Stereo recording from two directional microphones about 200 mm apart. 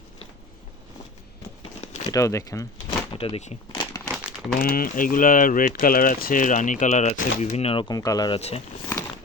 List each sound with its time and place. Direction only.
2.0 s speech: 15° left (ahead or behind)
3.1 s speech: 25° left (ahead or behind)
4.1 s crumpling: 5° right (ahead or behind)
4.6 s speech: 45° left (ahead or behind); by 8.4 s 20° left (ahead or behind)
8.4 s speech: 30° left (ahead or behind)